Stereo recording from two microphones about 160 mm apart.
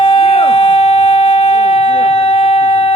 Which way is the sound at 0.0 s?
35° left (ahead or behind).